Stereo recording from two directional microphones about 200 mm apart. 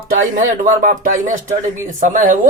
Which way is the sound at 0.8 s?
40° right (ahead or behind).